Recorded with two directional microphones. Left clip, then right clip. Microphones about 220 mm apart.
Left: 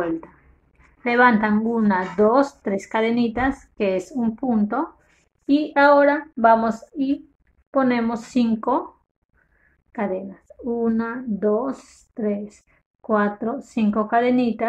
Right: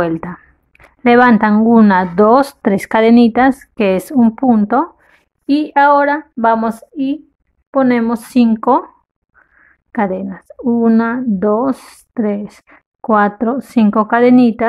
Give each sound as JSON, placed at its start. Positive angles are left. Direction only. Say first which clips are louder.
{"t": 1.0, "sound": "a woman's voice", "louder": "right 7 dB", "side_deg": -45}
{"t": 9.9, "sound": "speech", "louder": "right 8 dB", "side_deg": -45}